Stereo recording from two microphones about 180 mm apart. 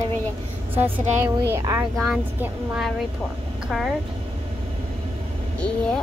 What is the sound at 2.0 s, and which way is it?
Speech, 5° right (ahead or behind).